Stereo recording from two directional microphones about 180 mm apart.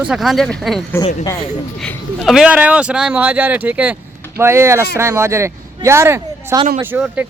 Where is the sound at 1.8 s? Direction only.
Centre (ahead or behind).